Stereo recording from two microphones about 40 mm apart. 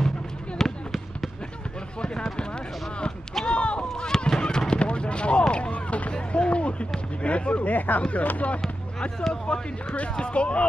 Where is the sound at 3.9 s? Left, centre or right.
Centre.